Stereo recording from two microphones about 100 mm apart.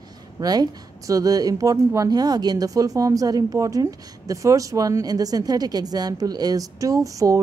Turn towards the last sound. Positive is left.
turn(degrees=-35)  # may be behind; listen again after turning